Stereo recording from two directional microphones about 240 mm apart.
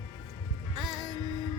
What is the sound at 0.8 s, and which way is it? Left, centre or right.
Music, centre.